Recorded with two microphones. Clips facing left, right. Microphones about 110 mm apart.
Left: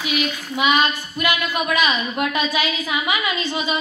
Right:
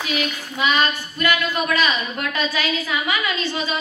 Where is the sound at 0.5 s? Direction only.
15° left (ahead or behind).